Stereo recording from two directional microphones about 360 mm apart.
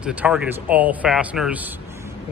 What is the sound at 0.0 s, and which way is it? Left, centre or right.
A man's voice, centre.